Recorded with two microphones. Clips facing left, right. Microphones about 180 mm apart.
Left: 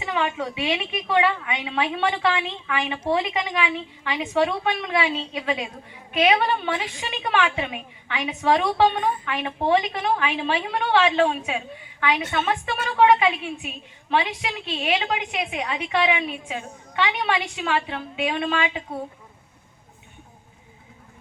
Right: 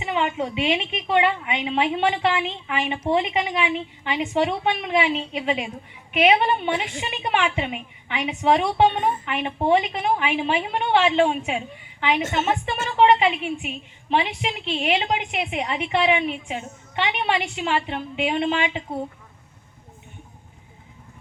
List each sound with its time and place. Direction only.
0.0 s a woman's voice: 20° right (ahead or behind)
14.8 s a woman's voice: 30° right (ahead or behind)